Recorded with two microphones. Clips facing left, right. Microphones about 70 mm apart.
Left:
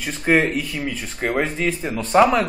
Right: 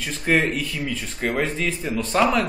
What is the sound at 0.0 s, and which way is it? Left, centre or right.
A man's voice, centre.